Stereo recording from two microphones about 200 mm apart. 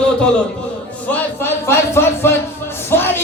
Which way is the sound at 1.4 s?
10° left (ahead or behind).